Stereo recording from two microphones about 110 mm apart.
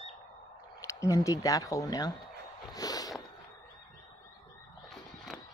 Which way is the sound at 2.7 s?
35° left (ahead or behind).